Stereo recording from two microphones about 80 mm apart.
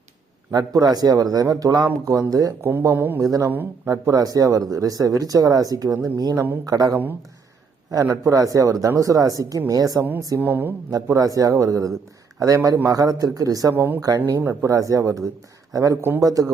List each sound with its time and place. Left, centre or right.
0.5 s speech: right
2.9 s speech: right
3.2 s speech: right
8.0 s speech: right
10.4 s speech: right
10.9 s speech: right
13.7 s speech: right
16.0 s speech: right